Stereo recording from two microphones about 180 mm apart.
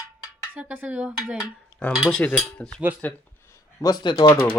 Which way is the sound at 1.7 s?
Centre (ahead or behind).